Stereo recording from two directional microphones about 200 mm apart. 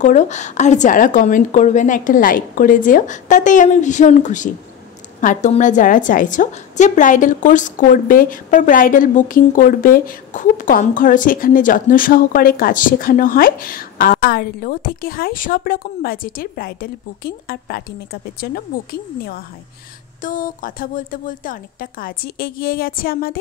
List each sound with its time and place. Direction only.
0.0 s a woman's voice: 35° left (ahead or behind)
20.2 s a woman's voice: 40° left (ahead or behind)